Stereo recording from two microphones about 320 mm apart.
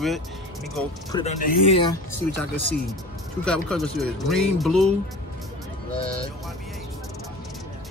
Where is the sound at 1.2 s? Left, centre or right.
Centre.